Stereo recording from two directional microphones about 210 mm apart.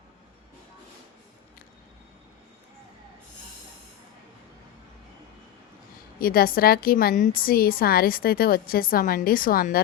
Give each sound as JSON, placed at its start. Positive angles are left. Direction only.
{"t": 6.1, "sound": "a woman's voice", "side_deg": 45}